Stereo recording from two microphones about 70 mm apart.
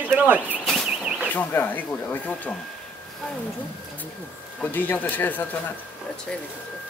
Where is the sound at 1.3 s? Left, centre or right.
Left.